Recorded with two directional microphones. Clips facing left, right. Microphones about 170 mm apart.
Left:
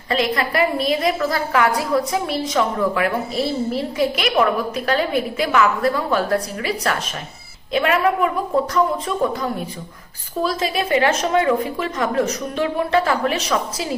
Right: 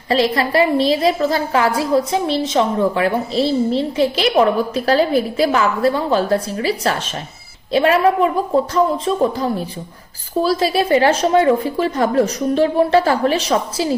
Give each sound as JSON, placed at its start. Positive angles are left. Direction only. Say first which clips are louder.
{"t": 0.1, "sound": "a woman's voice", "louder": "right 4 dB", "side_deg": -30}